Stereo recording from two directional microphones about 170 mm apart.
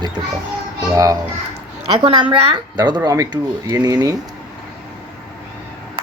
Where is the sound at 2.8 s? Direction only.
25° right (ahead or behind).